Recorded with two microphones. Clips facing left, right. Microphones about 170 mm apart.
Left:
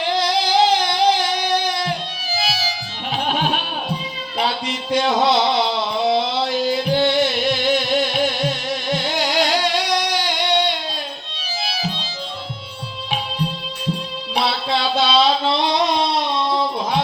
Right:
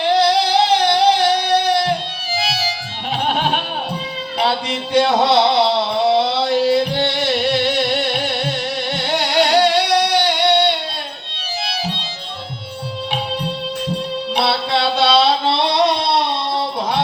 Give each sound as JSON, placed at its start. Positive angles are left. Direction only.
{"t": 0.1, "sound": "a sound", "side_deg": -65}
{"t": 2.4, "sound": "music", "side_deg": -70}
{"t": 4.4, "sound": "music", "side_deg": -65}
{"t": 6.1, "sound": "a sound", "side_deg": -70}
{"t": 6.6, "sound": "music", "side_deg": -70}
{"t": 11.6, "sound": "music", "side_deg": -65}
{"t": 14.3, "sound": "music", "side_deg": -70}